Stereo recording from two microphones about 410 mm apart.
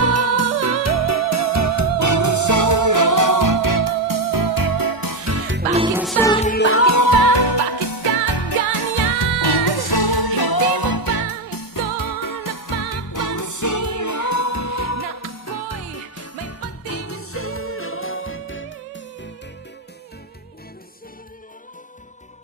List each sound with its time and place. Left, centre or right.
0.0 s music: right
5.7 s music: centre; by 19.0 s left